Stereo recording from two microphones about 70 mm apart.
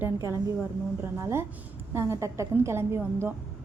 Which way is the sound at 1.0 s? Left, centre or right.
Right.